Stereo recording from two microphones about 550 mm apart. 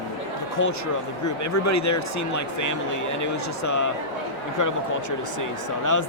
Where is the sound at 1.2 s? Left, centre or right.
Left.